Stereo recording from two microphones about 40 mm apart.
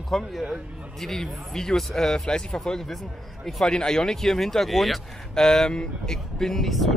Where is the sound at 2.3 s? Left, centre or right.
Centre.